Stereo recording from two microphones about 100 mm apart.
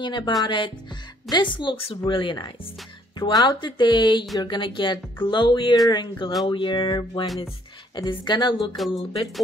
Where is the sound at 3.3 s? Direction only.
40° left (ahead or behind).